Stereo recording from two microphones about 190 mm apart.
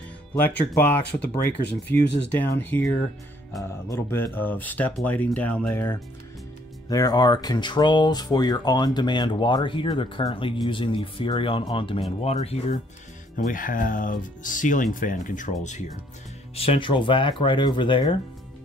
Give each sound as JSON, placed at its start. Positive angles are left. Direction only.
{"t": 0.4, "sound": "speech", "side_deg": 10}
{"t": 2.0, "sound": "speech", "side_deg": 65}
{"t": 2.2, "sound": "speech", "side_deg": 10}
{"t": 3.9, "sound": "speech", "side_deg": 10}
{"t": 13.5, "sound": "speech", "side_deg": 45}